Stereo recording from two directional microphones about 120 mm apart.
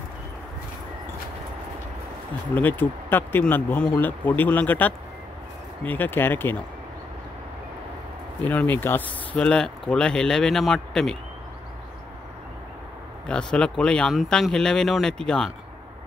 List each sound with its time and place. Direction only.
2.5 s speech: 15° left (ahead or behind)
8.5 s speech: 15° left (ahead or behind)
13.3 s speech: 5° left (ahead or behind)